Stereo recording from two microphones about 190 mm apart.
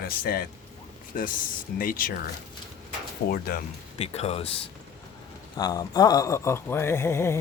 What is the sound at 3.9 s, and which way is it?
Speech, 35° left (ahead or behind).